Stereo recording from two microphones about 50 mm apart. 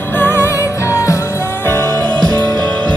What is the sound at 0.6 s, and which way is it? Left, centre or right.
Music, left.